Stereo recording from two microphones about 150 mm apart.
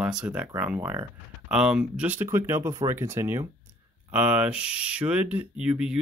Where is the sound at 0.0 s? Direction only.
5° right (ahead or behind).